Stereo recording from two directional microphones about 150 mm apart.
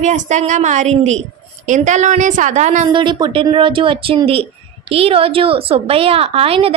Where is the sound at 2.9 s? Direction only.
30° right (ahead or behind).